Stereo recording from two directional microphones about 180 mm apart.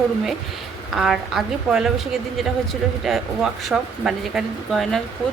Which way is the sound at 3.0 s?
Centre (ahead or behind).